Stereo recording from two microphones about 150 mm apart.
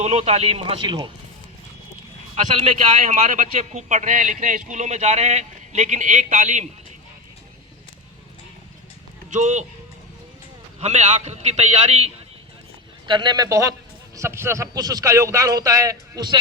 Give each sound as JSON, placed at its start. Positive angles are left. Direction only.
{"t": 0.0, "sound": "speech", "side_deg": -45}
{"t": 2.3, "sound": "a man's voice", "side_deg": -50}
{"t": 9.3, "sound": "a man's voice", "side_deg": -50}
{"t": 10.8, "sound": "a man's voice", "side_deg": -50}
{"t": 13.1, "sound": "a man's voice", "side_deg": -30}